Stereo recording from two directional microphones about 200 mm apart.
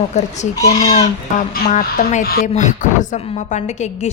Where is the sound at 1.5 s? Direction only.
45° left (ahead or behind).